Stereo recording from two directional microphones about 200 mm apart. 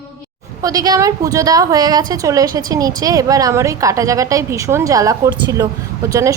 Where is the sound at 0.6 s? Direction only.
20° right (ahead or behind).